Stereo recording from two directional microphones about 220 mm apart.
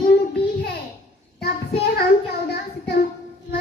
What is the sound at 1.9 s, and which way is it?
Child singing, 50° left (ahead or behind).